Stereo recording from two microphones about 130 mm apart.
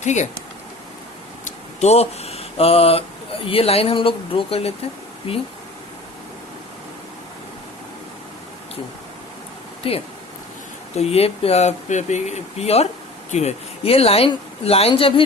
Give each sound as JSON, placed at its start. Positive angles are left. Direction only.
{"t": 0.0, "sound": "speech", "side_deg": 65}
{"t": 1.5, "sound": "a sound", "side_deg": 55}
{"t": 3.4, "sound": "speech", "side_deg": 45}
{"t": 9.8, "sound": "speech", "side_deg": 45}